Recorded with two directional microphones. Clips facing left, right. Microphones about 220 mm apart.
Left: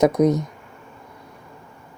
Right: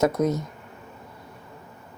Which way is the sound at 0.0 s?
15° left (ahead or behind).